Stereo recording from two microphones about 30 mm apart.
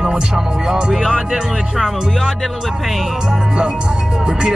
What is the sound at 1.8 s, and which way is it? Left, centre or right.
Speech, centre.